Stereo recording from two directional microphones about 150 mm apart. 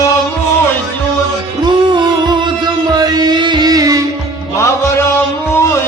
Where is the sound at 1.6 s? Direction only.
30° right (ahead or behind).